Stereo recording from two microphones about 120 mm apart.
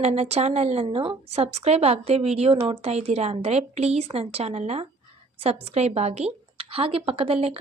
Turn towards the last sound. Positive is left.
turn(degrees=-60)  # may be behind; listen again after turning